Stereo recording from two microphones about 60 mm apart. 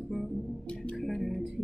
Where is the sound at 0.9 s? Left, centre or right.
Centre.